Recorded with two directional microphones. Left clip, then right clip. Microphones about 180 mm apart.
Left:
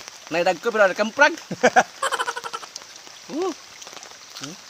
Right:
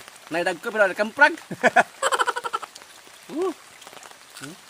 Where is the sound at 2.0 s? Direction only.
Centre (ahead or behind).